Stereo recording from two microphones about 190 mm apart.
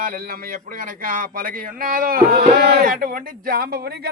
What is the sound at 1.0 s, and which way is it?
Speech, 45° right (ahead or behind).